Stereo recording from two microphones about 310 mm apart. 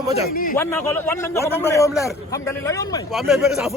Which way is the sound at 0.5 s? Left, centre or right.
Centre.